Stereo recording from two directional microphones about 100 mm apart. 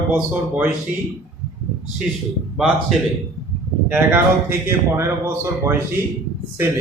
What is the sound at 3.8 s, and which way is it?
Speech, 20° right (ahead or behind).